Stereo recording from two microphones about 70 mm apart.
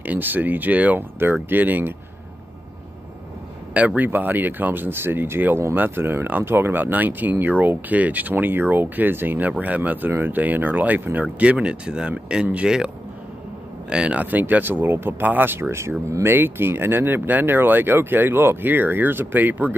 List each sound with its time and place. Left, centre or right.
0.0 s speech: right
3.7 s speech: right
13.8 s speech: centre
14.5 s speech: right
16.1 s speech: right